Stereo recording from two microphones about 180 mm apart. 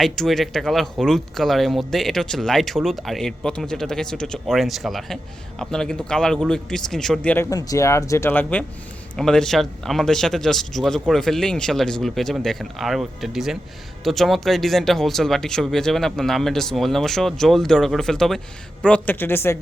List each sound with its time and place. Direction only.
0.0 s speech: centre (ahead or behind)